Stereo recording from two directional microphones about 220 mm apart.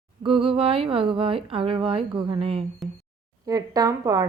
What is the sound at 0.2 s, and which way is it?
A woman's voice, 25° right (ahead or behind).